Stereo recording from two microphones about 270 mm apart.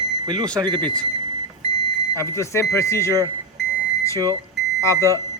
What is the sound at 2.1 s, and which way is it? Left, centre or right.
Speech, centre.